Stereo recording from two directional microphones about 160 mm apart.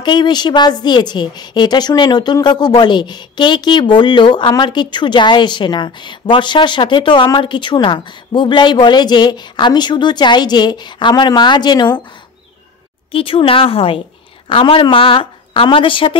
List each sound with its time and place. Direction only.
0.0 s a woman's voice: 30° left (ahead or behind)
13.1 s speech: 35° left (ahead or behind)